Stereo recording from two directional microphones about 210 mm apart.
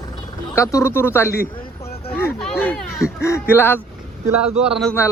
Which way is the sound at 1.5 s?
25° left (ahead or behind).